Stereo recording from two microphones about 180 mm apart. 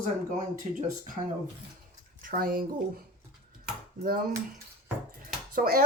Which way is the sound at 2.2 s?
50° right (ahead or behind).